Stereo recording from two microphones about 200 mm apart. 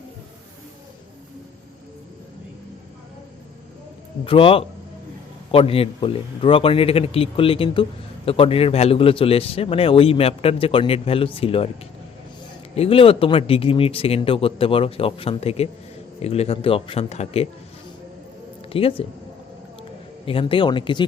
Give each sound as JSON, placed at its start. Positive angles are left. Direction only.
{"t": 4.3, "sound": "a man's voice", "side_deg": 25}
{"t": 12.7, "sound": "a man's voice", "side_deg": 30}
{"t": 18.7, "sound": "a man's voice", "side_deg": 30}
{"t": 20.2, "sound": "a man's voice", "side_deg": 25}